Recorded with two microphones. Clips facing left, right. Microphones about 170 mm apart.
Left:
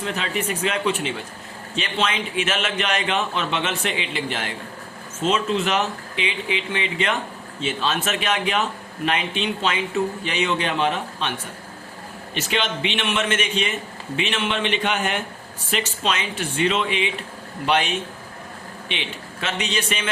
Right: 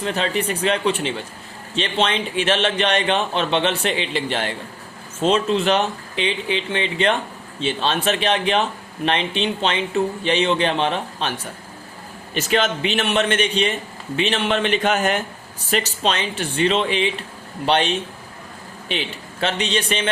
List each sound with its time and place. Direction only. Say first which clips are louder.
0.0 s a man's voice: right 4 dB; 35° right (ahead or behind)
12.3 s a man's voice: right 5 dB; 45° right (ahead or behind)